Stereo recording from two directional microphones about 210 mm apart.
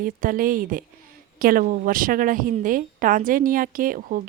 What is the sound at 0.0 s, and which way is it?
A woman's voice, 40° right (ahead or behind).